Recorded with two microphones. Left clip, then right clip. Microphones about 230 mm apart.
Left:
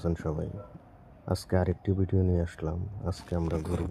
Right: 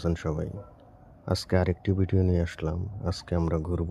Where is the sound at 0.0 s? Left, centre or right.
Centre.